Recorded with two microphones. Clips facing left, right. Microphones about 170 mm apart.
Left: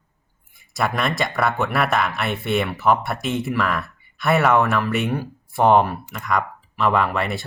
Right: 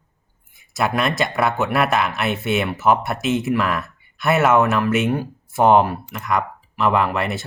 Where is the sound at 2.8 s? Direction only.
Centre (ahead or behind).